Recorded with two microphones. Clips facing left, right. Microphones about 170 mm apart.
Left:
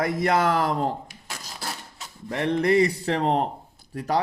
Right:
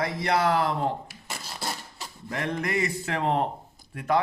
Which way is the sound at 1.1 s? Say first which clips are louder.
Right 1 dB; 5° right (ahead or behind).